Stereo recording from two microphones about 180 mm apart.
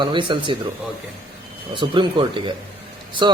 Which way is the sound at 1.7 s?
25° right (ahead or behind).